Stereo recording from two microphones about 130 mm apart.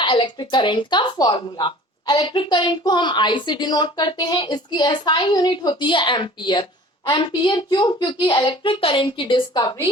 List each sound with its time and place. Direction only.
0.0 s speech: 40° left (ahead or behind)